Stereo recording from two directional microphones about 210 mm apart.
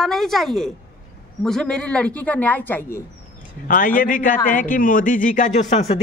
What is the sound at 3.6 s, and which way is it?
A man's voice, 40° left (ahead or behind).